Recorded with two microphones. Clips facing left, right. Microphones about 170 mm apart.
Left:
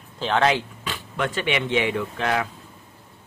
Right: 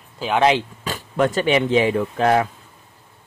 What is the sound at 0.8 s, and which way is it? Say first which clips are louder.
Speech: right 7 dB; 40° right (ahead or behind).